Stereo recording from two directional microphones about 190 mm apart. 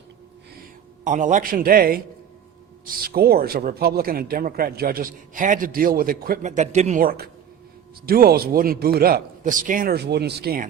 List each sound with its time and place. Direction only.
1.0 s a man's voice: 40° right (ahead or behind)